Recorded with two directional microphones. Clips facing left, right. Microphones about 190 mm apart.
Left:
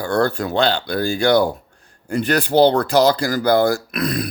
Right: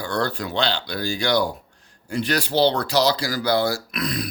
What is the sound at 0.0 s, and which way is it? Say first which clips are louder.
Speech: left 6 dB; 50° left (ahead or behind).